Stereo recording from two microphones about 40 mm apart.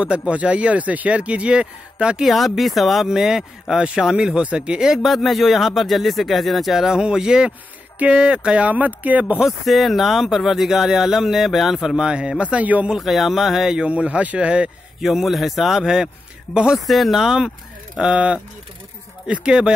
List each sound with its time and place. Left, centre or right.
0.0 s speech: right
2.2 s speech: centre
4.4 s speech: right
5.0 s speech: centre
6.9 s speech: centre
8.6 s speech: right
9.7 s speech: centre
12.0 s a man's voice: centre; by 12.8 s right
13.0 s speech: centre
13.8 s a man's voice: right
15.0 s speech: centre
16.8 s speech: centre
18.0 s a man's voice: right
19.4 s speech: right